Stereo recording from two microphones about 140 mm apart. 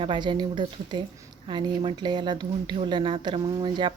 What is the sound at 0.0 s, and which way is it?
Speech, 35° right (ahead or behind).